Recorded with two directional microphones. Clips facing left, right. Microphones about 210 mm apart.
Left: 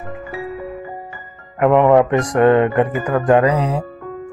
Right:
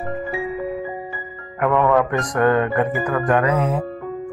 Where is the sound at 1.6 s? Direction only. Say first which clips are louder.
Left 5 dB; 20° left (ahead or behind).